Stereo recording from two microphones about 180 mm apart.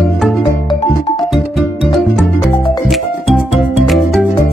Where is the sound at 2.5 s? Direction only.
25° left (ahead or behind).